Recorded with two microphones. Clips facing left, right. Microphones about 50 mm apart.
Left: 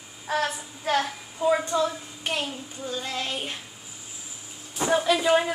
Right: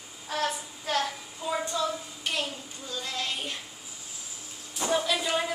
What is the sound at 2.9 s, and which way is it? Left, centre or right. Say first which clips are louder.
Child singing: left 3 dB; left.